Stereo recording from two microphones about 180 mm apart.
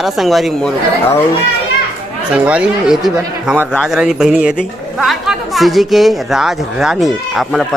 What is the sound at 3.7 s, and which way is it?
A woman's voice, 5° left (ahead or behind).